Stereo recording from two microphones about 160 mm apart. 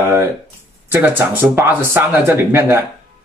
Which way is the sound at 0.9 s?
15° right (ahead or behind).